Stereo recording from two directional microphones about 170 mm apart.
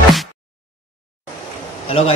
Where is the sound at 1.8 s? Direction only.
35° left (ahead or behind).